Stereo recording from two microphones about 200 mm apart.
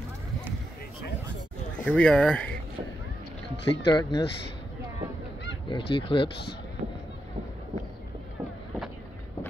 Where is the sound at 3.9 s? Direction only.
15° left (ahead or behind).